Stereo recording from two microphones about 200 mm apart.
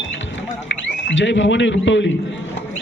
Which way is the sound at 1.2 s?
65° left (ahead or behind).